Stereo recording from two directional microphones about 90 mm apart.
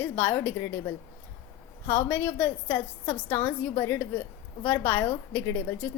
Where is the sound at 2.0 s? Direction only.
20° left (ahead or behind).